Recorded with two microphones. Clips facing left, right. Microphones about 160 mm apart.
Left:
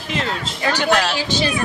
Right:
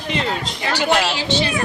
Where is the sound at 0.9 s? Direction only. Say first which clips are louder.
Right 1 dB; 10° right (ahead or behind).